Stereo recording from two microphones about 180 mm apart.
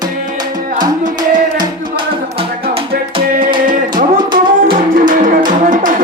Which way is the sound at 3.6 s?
50° right (ahead or behind).